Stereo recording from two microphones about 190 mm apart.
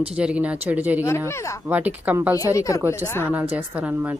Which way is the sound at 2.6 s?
15° left (ahead or behind).